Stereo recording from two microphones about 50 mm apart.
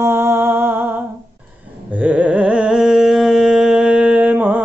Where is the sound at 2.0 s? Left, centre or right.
Right.